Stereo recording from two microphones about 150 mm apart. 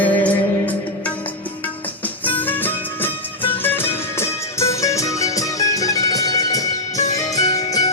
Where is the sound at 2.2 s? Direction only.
10° left (ahead or behind).